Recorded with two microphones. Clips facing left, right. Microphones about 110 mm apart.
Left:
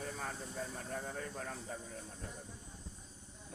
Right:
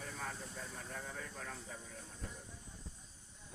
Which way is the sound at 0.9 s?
40° left (ahead or behind).